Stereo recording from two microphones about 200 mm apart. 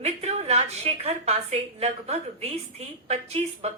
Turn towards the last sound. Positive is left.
turn(degrees=-30)  # may be behind; listen again after turning